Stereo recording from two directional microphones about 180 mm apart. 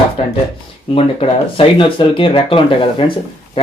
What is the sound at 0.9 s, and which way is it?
Speech, 30° left (ahead or behind).